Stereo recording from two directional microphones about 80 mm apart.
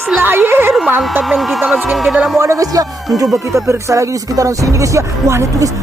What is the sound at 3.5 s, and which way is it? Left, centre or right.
Speech, right.